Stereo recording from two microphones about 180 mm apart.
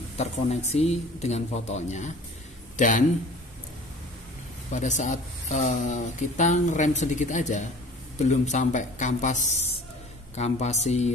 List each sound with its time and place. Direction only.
0.2 s speech: 40° left (ahead or behind)
4.7 s speech: 40° left (ahead or behind)